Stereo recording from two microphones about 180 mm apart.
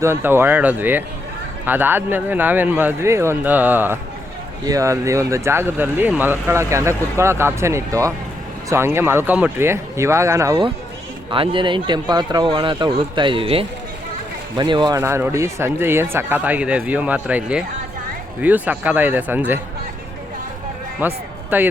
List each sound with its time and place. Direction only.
0.0 s speech: 15° right (ahead or behind)
11.3 s speech: 30° right (ahead or behind); by 19.5 s 10° right (ahead or behind)
21.0 s speech: 10° right (ahead or behind)